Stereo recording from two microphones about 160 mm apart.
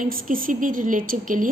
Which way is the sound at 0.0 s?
60° right (ahead or behind).